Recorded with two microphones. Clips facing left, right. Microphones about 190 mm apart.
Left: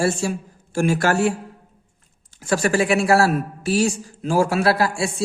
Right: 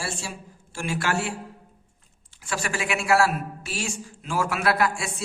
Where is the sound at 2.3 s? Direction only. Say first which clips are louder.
Left 11 dB; 40° left (ahead or behind).